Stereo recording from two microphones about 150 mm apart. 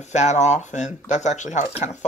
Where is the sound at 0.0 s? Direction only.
50° left (ahead or behind).